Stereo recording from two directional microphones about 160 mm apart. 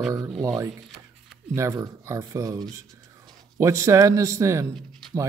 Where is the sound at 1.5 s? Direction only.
20° right (ahead or behind).